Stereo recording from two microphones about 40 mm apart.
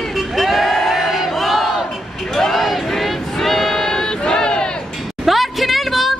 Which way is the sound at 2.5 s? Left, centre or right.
Centre.